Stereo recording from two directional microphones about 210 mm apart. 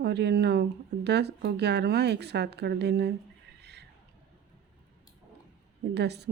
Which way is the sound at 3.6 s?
55° right (ahead or behind).